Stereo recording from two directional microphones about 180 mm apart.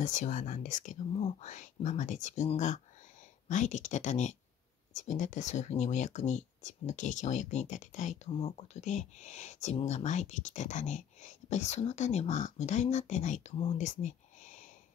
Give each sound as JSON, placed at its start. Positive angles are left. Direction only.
{"t": 0.0, "sound": "speech", "side_deg": 45}